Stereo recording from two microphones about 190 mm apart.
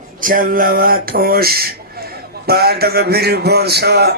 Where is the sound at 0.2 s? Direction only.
45° right (ahead or behind).